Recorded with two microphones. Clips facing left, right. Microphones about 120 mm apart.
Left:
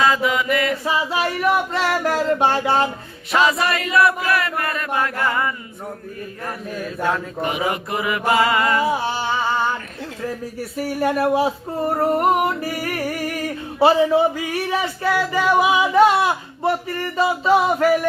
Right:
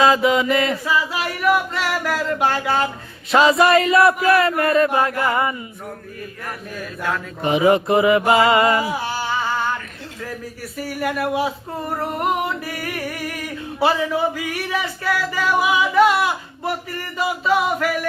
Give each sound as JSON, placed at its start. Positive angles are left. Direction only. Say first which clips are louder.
{"t": 0.0, "sound": "mantra", "louder": "right 3 dB", "side_deg": -25}
{"t": 0.9, "sound": "a sound", "louder": "left 1 dB", "side_deg": 25}
{"t": 3.3, "sound": "mantra", "louder": "right 5 dB", "side_deg": -30}
{"t": 7.4, "sound": "mantra", "louder": "right 9 dB", "side_deg": -25}
{"t": 8.8, "sound": "humming", "louder": "left 3 dB", "side_deg": 25}
{"t": 10.8, "sound": "female singing", "louder": "left 3 dB", "side_deg": 30}
{"t": 17.2, "sound": "a sound", "louder": "left 3 dB", "side_deg": 30}